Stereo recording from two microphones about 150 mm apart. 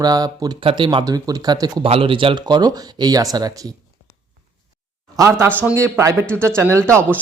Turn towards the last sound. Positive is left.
turn(degrees=-20)  # may be behind; listen again after turning